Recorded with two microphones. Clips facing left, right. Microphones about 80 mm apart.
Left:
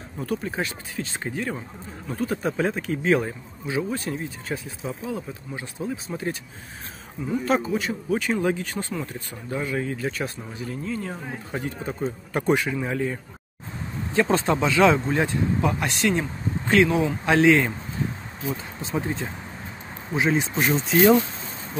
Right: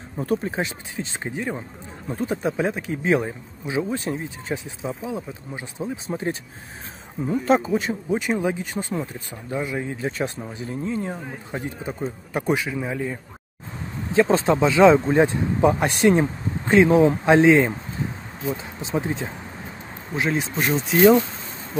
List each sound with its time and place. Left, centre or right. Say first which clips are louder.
0.2 s speech: right 3 dB; right
11.6 s speech: left 1 dB; centre
14.1 s speech: right 3 dB; centre
15.1 s speech: right 4 dB; right; by 19.3 s centre
20.2 s speech: left 1 dB; centre